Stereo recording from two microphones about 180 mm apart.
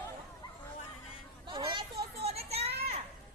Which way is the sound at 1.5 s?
25° right (ahead or behind).